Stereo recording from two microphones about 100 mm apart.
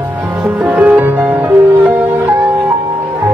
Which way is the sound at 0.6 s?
15° right (ahead or behind).